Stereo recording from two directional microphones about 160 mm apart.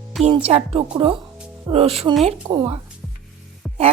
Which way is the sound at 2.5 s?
25° right (ahead or behind).